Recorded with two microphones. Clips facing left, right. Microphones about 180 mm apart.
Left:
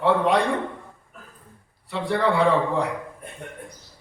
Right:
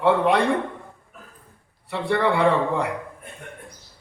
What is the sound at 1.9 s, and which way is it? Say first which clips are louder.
Speech: right 1 dB; 60° right (ahead or behind).